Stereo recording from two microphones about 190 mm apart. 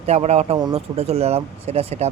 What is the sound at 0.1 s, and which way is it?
Speech, 35° right (ahead or behind).